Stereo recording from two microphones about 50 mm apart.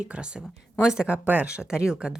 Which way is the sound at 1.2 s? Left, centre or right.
Right.